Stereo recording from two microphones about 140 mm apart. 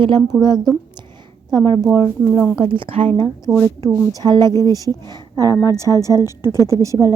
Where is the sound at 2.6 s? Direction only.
35° right (ahead or behind).